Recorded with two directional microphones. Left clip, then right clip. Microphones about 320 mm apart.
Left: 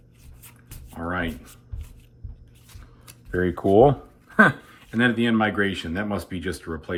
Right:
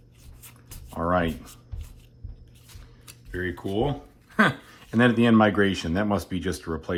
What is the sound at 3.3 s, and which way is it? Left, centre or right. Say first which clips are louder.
Speech: left 10 dB; centre.